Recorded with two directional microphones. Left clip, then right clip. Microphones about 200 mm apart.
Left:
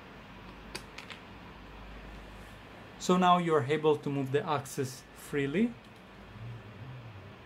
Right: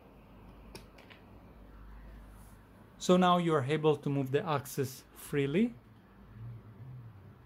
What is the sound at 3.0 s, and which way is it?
Speech, 35° right (ahead or behind).